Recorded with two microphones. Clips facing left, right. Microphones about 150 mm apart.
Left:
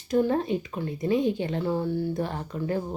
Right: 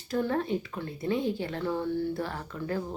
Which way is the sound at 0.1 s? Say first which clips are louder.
Left 5 dB; 20° left (ahead or behind).